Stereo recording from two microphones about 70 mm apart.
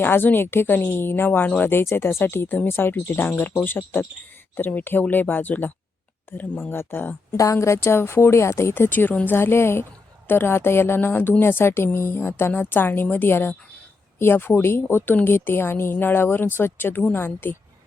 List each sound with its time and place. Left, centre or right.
0.0 s a woman's voice: left
7.3 s a woman's voice: left